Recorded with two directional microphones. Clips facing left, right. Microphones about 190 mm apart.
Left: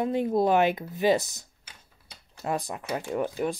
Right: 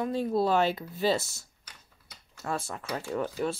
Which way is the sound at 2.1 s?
20° left (ahead or behind).